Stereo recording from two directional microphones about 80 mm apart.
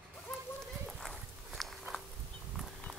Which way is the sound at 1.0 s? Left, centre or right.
Centre.